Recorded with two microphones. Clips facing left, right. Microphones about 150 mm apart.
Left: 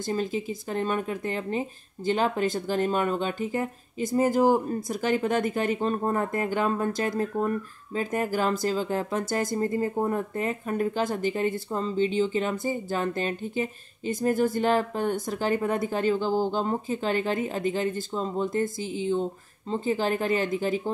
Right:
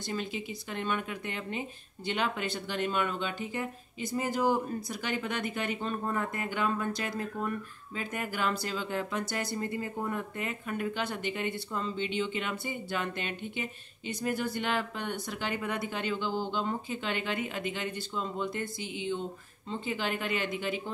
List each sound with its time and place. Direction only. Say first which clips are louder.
0.0 s speech: left 7 dB; 40° left (ahead or behind)